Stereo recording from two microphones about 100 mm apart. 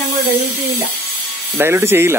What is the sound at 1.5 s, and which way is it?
Speech, 25° right (ahead or behind).